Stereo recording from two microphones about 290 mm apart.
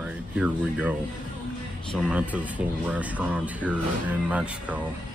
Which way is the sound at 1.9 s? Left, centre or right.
Centre.